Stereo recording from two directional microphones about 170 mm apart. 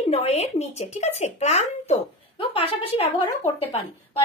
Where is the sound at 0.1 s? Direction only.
40° left (ahead or behind).